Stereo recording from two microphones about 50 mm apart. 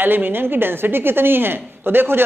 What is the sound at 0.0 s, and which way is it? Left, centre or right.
A man's voice, right.